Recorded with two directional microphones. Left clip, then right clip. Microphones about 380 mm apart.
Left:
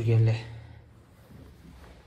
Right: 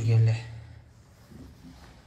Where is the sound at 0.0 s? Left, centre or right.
Centre.